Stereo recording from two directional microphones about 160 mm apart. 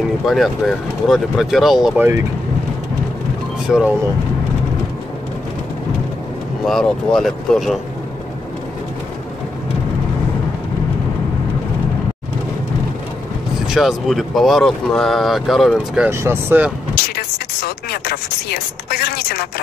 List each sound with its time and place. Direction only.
0.3 s speech: centre (ahead or behind)
3.6 s speech: 5° right (ahead or behind)
6.6 s speech: centre (ahead or behind)
13.7 s speech: centre (ahead or behind)
16.1 s speech: 15° right (ahead or behind)
17.1 s a sound: 75° left (ahead or behind)